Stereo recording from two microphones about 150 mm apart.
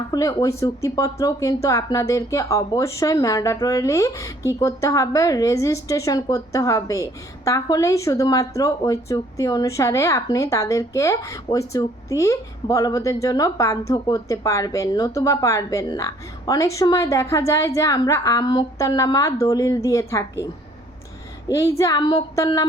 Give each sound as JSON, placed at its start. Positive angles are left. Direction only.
{"t": 0.1, "sound": "a woman's voice", "side_deg": 25}